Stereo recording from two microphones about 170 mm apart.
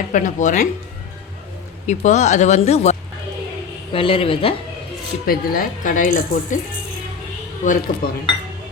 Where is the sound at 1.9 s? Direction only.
45° left (ahead or behind).